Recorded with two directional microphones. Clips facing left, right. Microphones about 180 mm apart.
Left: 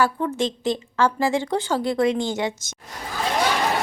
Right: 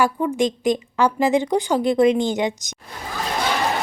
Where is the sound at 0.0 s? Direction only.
15° right (ahead or behind).